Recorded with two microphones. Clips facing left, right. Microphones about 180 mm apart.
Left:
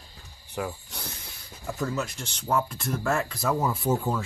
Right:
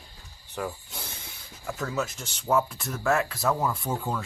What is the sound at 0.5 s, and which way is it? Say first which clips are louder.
Speech: left 1 dB; 5° left (ahead or behind).